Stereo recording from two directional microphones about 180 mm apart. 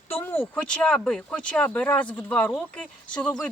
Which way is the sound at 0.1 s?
10° left (ahead or behind).